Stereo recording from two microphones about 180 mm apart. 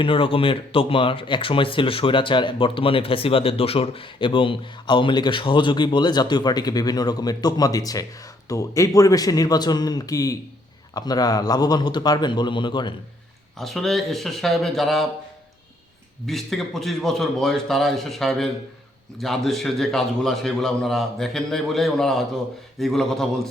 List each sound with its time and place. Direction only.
0.0 s speech: 30° left (ahead or behind)
13.6 s a man's voice: centre (ahead or behind)
16.2 s a man's voice: centre (ahead or behind)